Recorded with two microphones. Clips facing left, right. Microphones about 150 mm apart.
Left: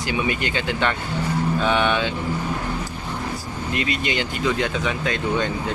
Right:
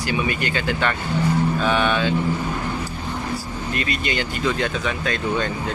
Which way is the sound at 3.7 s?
20° left (ahead or behind).